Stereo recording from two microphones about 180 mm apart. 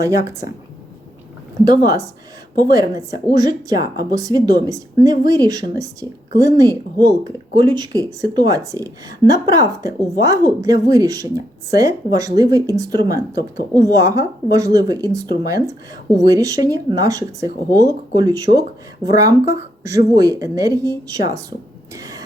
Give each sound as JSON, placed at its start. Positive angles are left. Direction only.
{"t": 0.0, "sound": "a woman's voice", "side_deg": -15}
{"t": 1.7, "sound": "a woman's voice", "side_deg": -20}
{"t": 21.9, "sound": "cough", "side_deg": -20}